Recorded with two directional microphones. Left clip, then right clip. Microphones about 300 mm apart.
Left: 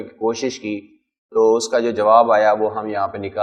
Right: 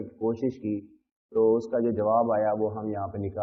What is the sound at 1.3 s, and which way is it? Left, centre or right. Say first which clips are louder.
A man's voice: left 8 dB; centre.